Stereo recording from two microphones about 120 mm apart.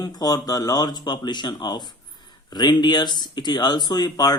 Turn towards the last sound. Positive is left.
turn(degrees=35)  # may be behind; listen again after turning